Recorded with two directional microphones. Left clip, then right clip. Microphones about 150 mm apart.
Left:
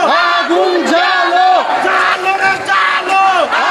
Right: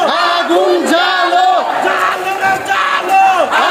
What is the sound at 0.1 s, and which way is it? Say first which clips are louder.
Crowd: left 1 dB; 20° left (ahead or behind).